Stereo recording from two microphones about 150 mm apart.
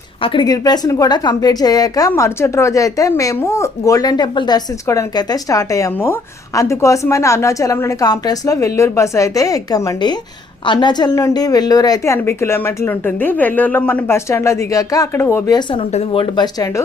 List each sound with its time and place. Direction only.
0.2 s a woman's voice: 35° left (ahead or behind)
15.7 s a woman's voice: 40° left (ahead or behind)